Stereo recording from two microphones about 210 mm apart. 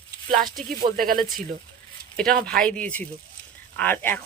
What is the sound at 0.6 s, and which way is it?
Speech, 40° right (ahead or behind).